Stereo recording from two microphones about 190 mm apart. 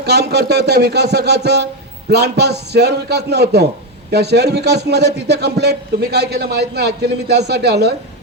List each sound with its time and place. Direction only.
0.0 s a man's voice: 60° right (ahead or behind)